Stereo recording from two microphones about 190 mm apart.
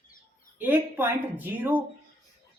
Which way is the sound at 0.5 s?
10° right (ahead or behind).